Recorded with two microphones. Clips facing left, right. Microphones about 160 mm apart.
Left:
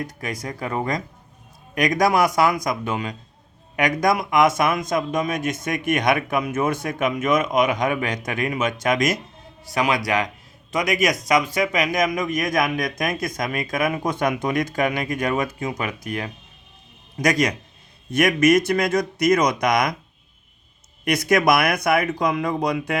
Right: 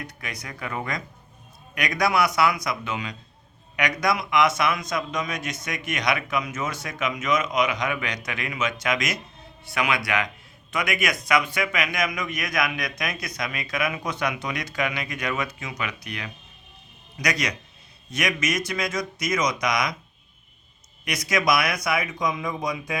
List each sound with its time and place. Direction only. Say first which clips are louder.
0.0 s a man's voice: left 8 dB; 40° left (ahead or behind)
21.0 s speech: left 7 dB; 55° left (ahead or behind)